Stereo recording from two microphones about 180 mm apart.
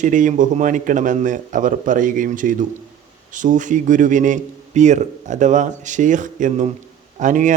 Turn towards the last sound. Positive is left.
turn(degrees=-45)  # may be behind; listen again after turning